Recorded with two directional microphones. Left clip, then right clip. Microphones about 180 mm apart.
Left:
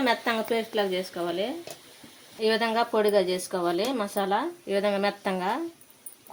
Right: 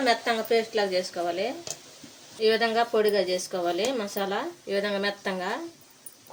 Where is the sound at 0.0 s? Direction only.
50° left (ahead or behind).